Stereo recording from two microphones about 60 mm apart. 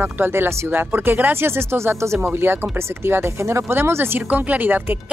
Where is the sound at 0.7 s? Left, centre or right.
Right.